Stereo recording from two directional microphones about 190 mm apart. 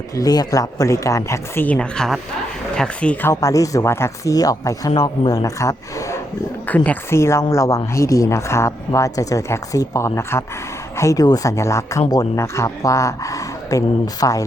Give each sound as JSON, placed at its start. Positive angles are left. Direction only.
{"t": 0.2, "sound": "speech", "side_deg": 20}